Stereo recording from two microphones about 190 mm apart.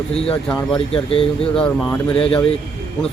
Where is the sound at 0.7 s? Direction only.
30° left (ahead or behind).